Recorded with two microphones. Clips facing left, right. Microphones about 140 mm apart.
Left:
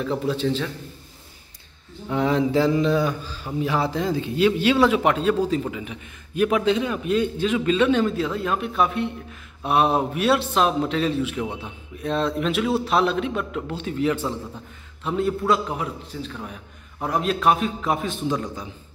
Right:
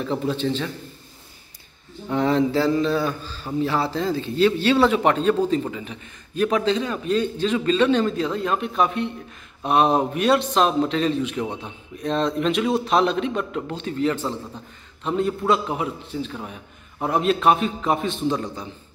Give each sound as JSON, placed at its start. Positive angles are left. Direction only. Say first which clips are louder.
{"t": 0.0, "sound": "a man's voice", "louder": "even", "side_deg": 0}
{"t": 2.0, "sound": "a man's voice", "louder": "right 1 dB", "side_deg": 5}